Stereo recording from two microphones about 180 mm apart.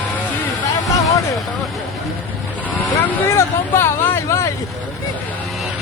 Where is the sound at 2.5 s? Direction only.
10° left (ahead or behind).